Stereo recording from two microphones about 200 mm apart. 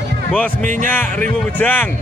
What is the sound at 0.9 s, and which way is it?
Speech, 10° left (ahead or behind).